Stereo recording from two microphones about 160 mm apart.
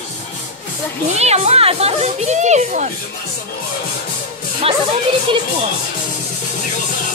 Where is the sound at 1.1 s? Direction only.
45° right (ahead or behind).